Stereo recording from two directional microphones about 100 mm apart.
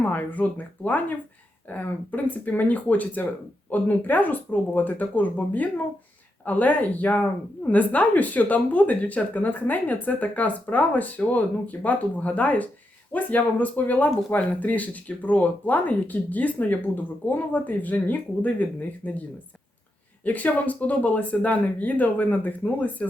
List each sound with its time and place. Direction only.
0.0 s a woman's voice: 15° left (ahead or behind)
20.2 s a woman's voice: 15° left (ahead or behind)